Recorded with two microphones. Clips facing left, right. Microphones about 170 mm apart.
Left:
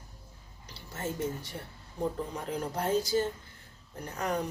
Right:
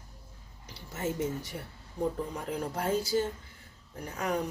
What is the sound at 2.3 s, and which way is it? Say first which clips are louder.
Speech: even; 5° right (ahead or behind).